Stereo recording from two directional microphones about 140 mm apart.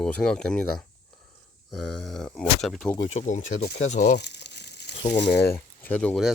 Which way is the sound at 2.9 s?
40° left (ahead or behind).